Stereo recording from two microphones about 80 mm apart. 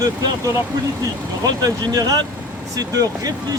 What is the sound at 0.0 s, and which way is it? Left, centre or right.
Speech, right.